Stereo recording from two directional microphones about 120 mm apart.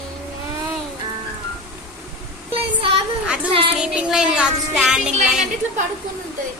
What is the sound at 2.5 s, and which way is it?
Child singing, 50° right (ahead or behind).